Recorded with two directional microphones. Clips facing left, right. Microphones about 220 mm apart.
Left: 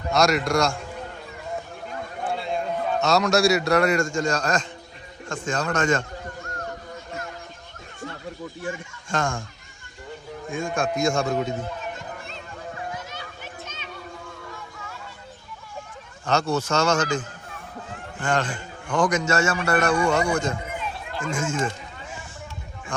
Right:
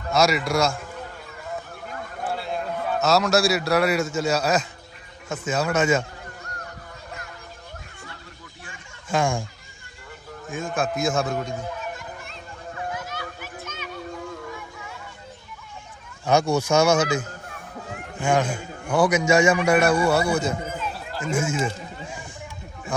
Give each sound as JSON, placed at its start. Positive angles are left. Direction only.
{"t": 0.1, "sound": "a man's voice", "side_deg": 0}
{"t": 2.2, "sound": "a man's voice", "side_deg": -5}
{"t": 9.0, "sound": "a man's voice", "side_deg": -10}
{"t": 10.5, "sound": "a man's voice", "side_deg": 0}
{"t": 12.2, "sound": "a sound", "side_deg": 30}
{"t": 16.2, "sound": "a man's voice", "side_deg": -10}
{"t": 22.9, "sound": "speech", "side_deg": -5}